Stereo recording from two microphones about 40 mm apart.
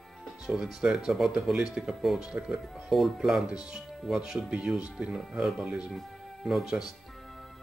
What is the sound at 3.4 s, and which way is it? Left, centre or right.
Speech, centre.